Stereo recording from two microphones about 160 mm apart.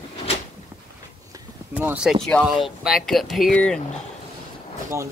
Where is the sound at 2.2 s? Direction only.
5° left (ahead or behind).